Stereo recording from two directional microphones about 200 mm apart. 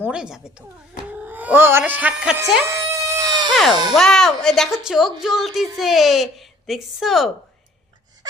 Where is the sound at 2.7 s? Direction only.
15° right (ahead or behind).